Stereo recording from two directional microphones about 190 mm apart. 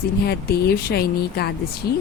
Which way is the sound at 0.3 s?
55° left (ahead or behind).